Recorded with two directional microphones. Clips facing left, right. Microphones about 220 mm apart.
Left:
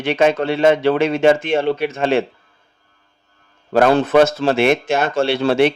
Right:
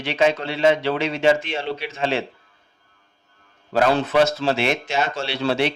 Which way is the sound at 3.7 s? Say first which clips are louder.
Left 6 dB; 55° left (ahead or behind).